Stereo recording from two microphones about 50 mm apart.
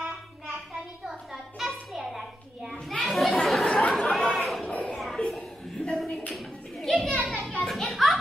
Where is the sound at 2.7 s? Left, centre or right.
Centre.